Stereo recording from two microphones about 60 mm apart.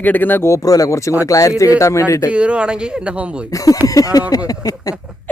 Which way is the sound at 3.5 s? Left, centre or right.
Left.